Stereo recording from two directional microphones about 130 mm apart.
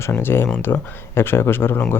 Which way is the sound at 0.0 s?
15° left (ahead or behind).